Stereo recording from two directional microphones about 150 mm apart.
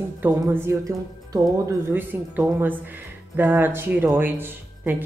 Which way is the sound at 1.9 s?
10° right (ahead or behind).